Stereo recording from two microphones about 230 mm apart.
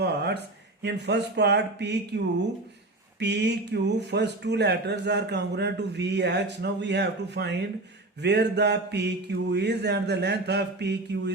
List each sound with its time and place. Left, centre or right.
0.0 s speech: right